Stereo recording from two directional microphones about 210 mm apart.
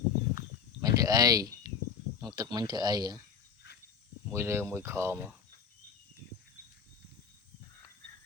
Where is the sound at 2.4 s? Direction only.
20° right (ahead or behind).